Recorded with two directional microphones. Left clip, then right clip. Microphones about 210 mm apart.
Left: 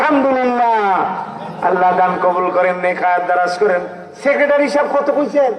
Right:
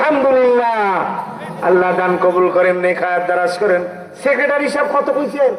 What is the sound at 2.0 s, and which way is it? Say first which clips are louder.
A man's voice: even; 35° right (ahead or behind).